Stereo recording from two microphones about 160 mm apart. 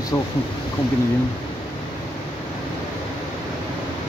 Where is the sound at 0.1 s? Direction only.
20° left (ahead or behind).